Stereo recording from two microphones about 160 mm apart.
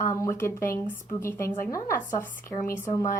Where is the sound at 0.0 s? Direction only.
15° left (ahead or behind).